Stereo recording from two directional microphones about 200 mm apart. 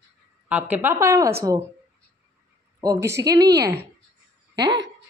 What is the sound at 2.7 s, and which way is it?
Speech, 15° right (ahead or behind).